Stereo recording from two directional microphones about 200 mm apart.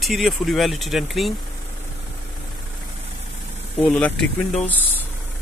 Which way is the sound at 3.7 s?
5° left (ahead or behind).